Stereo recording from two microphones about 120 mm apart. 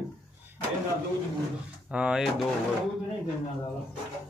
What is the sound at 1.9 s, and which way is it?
Speech, 10° right (ahead or behind).